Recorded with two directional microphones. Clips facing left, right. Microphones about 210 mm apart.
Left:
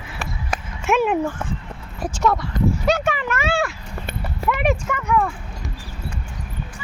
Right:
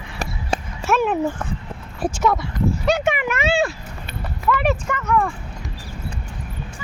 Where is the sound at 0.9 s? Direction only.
10° left (ahead or behind).